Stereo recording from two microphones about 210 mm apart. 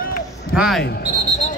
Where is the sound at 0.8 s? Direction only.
50° left (ahead or behind).